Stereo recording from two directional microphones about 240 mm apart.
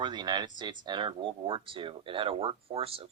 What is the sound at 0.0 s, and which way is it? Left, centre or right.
Speech, centre.